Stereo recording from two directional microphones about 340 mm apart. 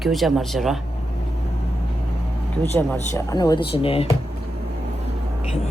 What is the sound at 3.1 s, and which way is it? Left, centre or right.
Speech, centre.